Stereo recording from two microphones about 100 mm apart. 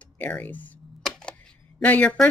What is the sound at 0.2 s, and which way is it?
Speech, 15° left (ahead or behind).